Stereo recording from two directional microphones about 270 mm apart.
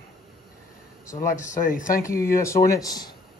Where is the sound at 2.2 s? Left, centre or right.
Centre.